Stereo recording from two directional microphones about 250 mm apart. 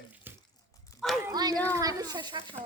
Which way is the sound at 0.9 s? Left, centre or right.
Centre.